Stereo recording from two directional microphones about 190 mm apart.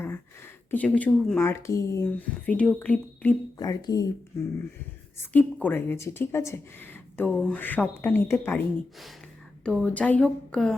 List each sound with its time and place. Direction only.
0.0 s speech: 10° left (ahead or behind)
3.6 s speech: 20° left (ahead or behind)
5.2 s speech: 5° left (ahead or behind)
9.6 s speech: 5° left (ahead or behind)